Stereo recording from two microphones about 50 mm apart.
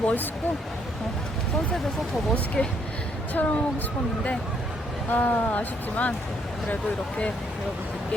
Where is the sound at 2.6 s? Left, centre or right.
Left.